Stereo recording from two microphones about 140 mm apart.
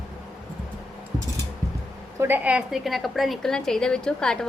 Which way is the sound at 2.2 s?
15° right (ahead or behind).